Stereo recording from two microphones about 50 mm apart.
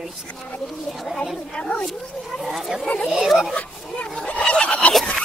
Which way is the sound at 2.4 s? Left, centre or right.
Centre.